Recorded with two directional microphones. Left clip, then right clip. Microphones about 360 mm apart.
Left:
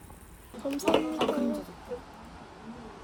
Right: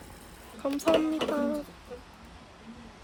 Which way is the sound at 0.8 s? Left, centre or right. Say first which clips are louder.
Right 1 dB; centre.